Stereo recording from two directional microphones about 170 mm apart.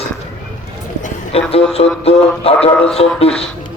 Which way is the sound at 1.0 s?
35° left (ahead or behind).